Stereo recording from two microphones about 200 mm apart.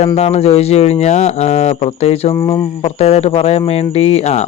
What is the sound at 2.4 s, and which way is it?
Speech, 20° left (ahead or behind).